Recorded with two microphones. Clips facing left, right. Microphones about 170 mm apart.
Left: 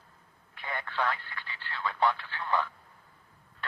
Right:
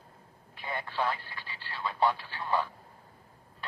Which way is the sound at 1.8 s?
15° right (ahead or behind).